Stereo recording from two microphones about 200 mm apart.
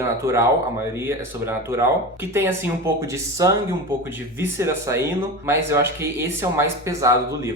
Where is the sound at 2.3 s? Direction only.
15° right (ahead or behind).